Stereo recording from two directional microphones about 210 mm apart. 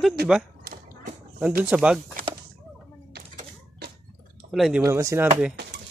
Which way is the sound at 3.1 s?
50° right (ahead or behind).